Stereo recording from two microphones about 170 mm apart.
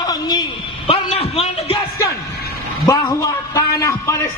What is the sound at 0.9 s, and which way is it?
Speech, 35° left (ahead or behind).